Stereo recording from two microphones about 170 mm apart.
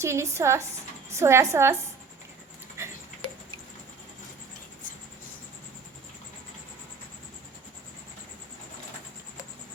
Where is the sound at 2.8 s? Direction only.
15° right (ahead or behind).